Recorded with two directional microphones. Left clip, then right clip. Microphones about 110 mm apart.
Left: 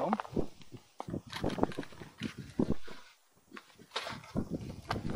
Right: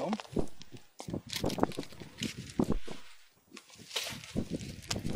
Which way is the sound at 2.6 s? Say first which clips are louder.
Right 1 dB; 25° right (ahead or behind).